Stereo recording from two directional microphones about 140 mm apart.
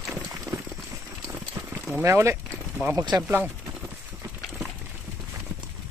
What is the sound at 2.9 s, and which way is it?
Speech, 25° right (ahead or behind).